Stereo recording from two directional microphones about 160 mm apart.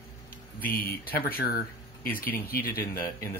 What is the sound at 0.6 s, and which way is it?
Speech, 65° left (ahead or behind).